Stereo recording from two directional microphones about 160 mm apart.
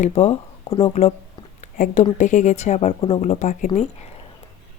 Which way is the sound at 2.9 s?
30° left (ahead or behind).